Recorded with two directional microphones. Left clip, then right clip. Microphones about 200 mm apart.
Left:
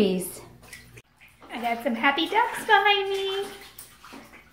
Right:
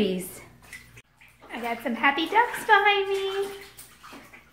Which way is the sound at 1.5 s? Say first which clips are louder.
Left 3 dB; 10° right (ahead or behind).